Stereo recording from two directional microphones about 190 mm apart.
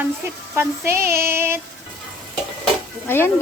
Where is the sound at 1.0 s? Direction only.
50° right (ahead or behind).